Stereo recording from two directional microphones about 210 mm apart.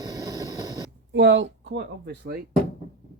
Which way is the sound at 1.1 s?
60° right (ahead or behind).